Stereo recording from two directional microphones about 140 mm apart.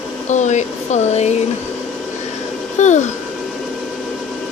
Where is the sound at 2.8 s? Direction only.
55° left (ahead or behind).